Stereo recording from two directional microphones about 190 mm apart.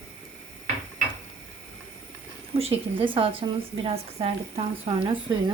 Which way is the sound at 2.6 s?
30° right (ahead or behind).